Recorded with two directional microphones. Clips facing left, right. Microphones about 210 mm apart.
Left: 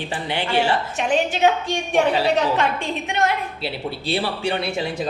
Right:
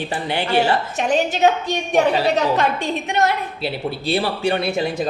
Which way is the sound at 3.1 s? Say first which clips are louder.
Right 2 dB; 40° right (ahead or behind).